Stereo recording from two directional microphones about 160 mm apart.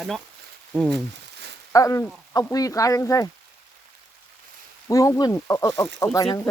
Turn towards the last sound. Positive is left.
turn(degrees=20)  # may be behind; listen again after turning